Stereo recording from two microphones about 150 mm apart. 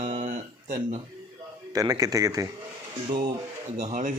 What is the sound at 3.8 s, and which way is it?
Speech, 50° right (ahead or behind).